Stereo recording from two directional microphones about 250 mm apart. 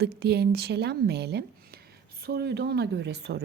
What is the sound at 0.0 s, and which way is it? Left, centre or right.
Speech, right.